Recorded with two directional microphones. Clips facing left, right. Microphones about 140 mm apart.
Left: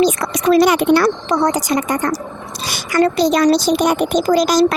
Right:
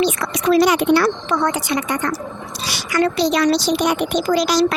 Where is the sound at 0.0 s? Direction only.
45° left (ahead or behind).